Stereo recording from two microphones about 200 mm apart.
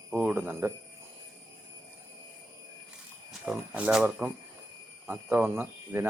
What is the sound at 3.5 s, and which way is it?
Speech, 5° right (ahead or behind).